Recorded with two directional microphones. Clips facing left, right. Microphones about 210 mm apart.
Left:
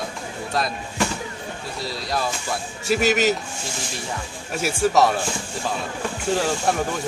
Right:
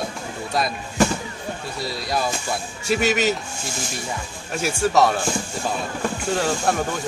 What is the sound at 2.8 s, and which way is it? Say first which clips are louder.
Speech: left 1 dB; centre (ahead or behind).